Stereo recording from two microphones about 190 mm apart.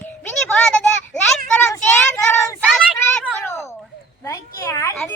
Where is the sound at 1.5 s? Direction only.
15° left (ahead or behind).